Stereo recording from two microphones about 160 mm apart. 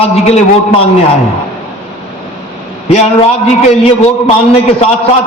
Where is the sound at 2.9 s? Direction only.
40° left (ahead or behind).